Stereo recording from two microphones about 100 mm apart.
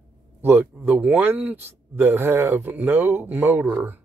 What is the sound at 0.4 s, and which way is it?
A man's voice, 20° right (ahead or behind).